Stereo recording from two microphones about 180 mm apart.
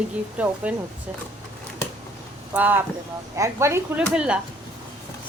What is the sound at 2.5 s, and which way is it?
Speech, 10° right (ahead or behind).